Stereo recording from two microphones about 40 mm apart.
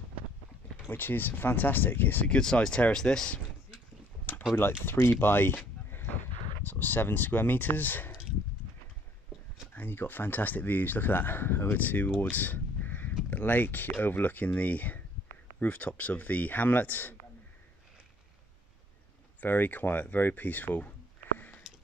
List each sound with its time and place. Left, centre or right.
0.8 s speech: left
2.2 s speech: left
4.8 s speech: left
5.9 s a sound: left
6.6 s speech: left
9.8 s speech: left
11.8 s speech: left
12.5 s a sound: left
13.3 s speech: left
19.4 s speech: left